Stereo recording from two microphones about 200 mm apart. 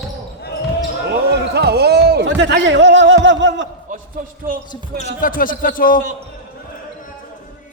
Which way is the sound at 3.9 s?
40° right (ahead or behind).